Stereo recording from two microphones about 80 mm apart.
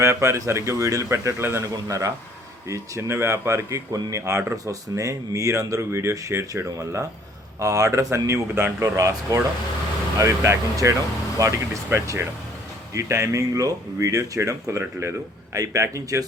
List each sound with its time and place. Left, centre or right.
0.0 s speech: right
1.7 s speech: right